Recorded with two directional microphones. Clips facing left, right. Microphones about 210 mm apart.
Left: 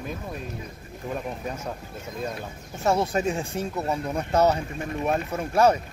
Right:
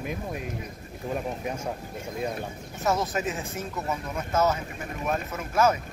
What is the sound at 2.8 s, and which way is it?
Speech, 30° left (ahead or behind).